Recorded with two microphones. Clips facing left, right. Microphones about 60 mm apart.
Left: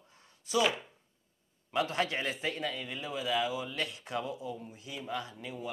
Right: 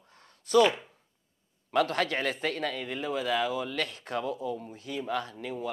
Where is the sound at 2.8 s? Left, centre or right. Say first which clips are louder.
Right 5 dB; right.